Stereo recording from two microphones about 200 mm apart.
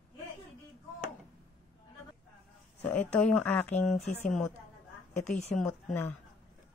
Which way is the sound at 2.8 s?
10° left (ahead or behind).